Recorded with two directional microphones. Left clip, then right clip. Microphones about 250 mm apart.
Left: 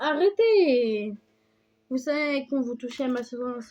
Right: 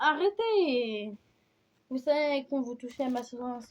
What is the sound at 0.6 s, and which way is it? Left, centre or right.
Speech, left.